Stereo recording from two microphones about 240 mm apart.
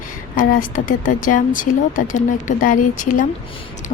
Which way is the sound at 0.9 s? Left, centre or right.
Left.